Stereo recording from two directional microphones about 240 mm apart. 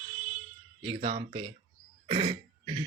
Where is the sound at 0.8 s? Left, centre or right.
Right.